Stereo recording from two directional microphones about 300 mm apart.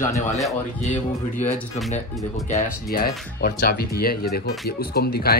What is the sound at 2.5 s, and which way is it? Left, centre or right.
Speech, left.